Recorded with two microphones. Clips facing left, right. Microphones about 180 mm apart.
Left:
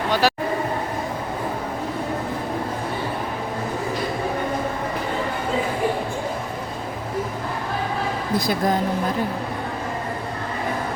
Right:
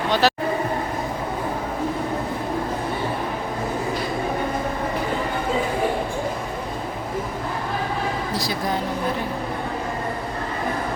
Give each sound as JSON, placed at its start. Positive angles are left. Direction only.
{"t": 0.1, "sound": "speech", "side_deg": 10}